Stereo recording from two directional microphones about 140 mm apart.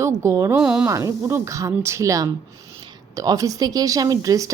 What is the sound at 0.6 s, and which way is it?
Speech, 5° right (ahead or behind).